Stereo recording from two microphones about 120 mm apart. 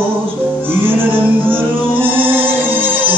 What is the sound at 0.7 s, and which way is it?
Music, 15° right (ahead or behind).